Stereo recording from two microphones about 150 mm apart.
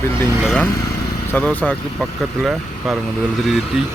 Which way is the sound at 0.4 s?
Centre (ahead or behind).